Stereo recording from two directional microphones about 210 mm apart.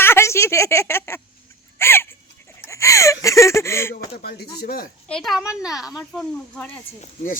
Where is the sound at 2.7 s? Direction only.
15° left (ahead or behind).